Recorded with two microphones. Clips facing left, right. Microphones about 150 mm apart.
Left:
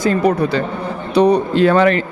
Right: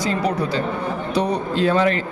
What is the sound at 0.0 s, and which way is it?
Speech, 55° left (ahead or behind).